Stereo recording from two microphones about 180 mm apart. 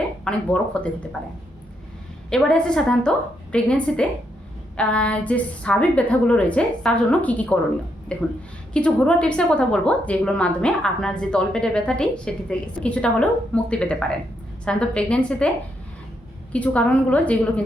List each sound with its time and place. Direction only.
0.3 s a woman's voice: 5° left (ahead or behind)
2.3 s a woman's voice: 5° left (ahead or behind)